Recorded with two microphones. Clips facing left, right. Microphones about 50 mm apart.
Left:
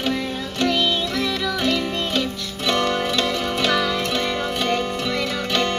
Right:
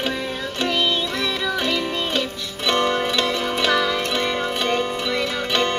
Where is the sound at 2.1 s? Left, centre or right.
Right.